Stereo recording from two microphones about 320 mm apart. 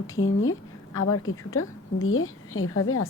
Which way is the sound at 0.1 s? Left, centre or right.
Left.